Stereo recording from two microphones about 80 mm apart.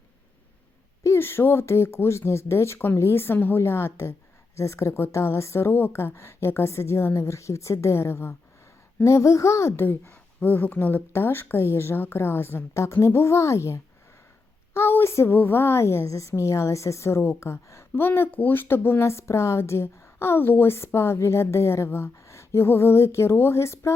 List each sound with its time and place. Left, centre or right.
1.0 s a woman's voice: left